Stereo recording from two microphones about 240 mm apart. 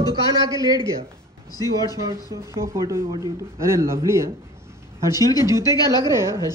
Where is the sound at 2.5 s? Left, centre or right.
Centre.